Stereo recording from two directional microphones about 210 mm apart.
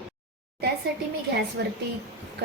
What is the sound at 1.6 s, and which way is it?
Speech, 55° right (ahead or behind).